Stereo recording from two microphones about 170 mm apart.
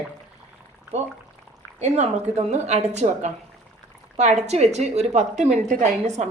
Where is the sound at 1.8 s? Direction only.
40° right (ahead or behind).